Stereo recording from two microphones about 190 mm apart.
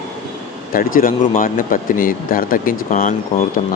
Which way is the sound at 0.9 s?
45° left (ahead or behind).